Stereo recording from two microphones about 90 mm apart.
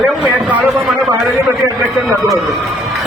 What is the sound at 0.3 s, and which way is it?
Speech, 15° right (ahead or behind).